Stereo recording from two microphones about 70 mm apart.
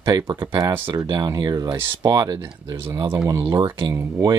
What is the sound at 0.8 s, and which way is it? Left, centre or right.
Speech, right.